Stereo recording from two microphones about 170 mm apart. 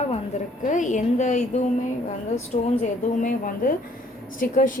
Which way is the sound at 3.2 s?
50° left (ahead or behind).